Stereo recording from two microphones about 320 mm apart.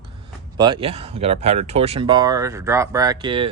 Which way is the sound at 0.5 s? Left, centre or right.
Centre.